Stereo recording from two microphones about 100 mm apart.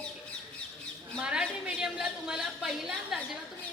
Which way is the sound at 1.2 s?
10° right (ahead or behind).